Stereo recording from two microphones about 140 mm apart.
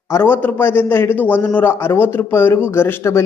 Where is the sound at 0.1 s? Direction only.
15° left (ahead or behind).